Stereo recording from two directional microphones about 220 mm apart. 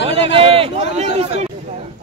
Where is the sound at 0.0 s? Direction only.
25° right (ahead or behind).